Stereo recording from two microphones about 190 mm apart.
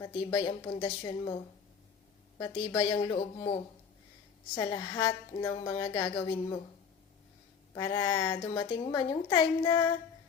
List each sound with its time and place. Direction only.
0.0 s a woman's voice: 25° left (ahead or behind)
2.4 s a woman's voice: 20° left (ahead or behind)
7.7 s a woman's voice: 25° left (ahead or behind)